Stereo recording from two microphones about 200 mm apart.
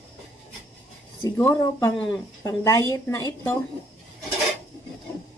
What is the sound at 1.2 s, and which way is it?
A woman's voice, 15° left (ahead or behind).